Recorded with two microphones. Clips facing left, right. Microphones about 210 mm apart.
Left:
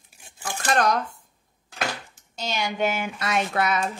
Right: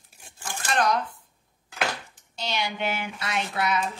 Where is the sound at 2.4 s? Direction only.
45° left (ahead or behind).